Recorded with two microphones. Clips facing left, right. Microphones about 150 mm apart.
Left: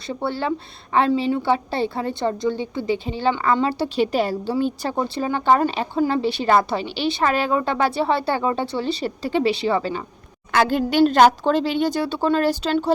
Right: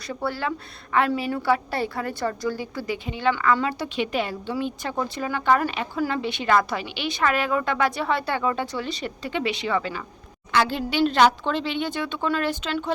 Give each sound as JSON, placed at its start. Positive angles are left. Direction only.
{"t": 0.1, "sound": "a woman's voice", "side_deg": 25}
{"t": 10.5, "sound": "a woman's voice", "side_deg": 50}